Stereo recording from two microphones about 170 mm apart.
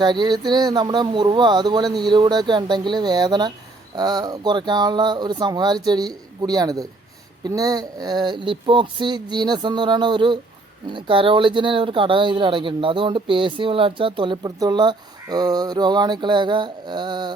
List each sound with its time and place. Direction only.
0.0 s speech: 25° right (ahead or behind)